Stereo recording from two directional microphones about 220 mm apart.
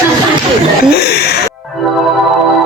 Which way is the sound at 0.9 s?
45° left (ahead or behind).